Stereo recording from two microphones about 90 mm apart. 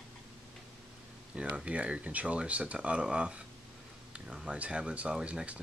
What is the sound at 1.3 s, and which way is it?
Speech, 10° right (ahead or behind).